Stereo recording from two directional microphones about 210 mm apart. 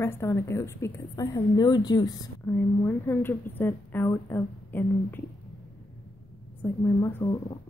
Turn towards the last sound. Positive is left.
turn(degrees=15)  # may be behind; listen again after turning